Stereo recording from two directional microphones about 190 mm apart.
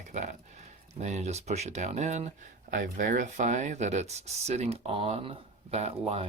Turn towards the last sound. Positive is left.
turn(degrees=-30)  # may be behind; listen again after turning